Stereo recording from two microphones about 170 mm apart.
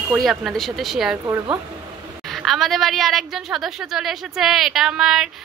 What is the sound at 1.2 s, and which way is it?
Speech, 20° right (ahead or behind).